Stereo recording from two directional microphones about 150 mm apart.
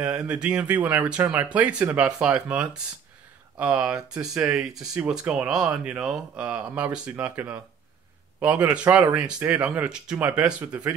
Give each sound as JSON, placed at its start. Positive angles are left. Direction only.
{"t": 0.0, "sound": "speech", "side_deg": -20}
{"t": 0.3, "sound": "speech", "side_deg": -10}